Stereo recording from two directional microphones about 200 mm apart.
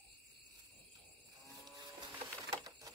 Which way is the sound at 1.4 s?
15° right (ahead or behind).